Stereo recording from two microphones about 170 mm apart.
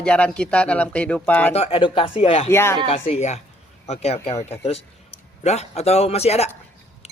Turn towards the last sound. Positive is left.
turn(degrees=40)  # may be behind; listen again after turning